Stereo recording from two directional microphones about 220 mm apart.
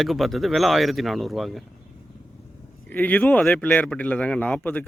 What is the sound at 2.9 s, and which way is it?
A man's voice, 5° left (ahead or behind).